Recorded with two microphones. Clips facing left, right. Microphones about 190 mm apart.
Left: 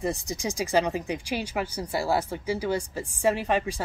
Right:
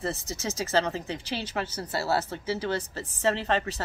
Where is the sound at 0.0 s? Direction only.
15° left (ahead or behind).